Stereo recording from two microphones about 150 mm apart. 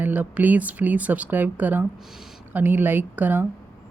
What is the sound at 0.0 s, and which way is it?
Speech, 10° right (ahead or behind).